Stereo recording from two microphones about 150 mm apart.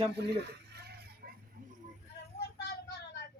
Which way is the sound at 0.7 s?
90° right.